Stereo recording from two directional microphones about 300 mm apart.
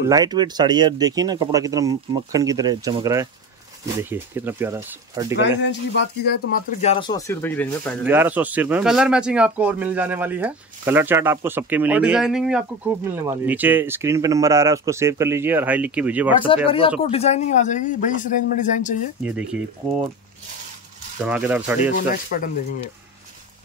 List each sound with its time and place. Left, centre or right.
0.1 s speech: centre
5.6 s speech: left
6.8 s speech: centre
8.1 s speech: centre
16.6 s speech: centre
19.2 s speech: centre
21.2 s speech: centre